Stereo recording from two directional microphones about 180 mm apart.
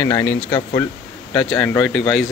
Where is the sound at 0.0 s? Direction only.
10° left (ahead or behind).